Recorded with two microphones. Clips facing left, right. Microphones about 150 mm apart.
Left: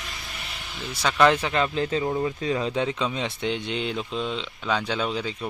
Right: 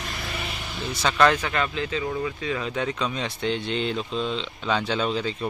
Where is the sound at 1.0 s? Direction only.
15° left (ahead or behind).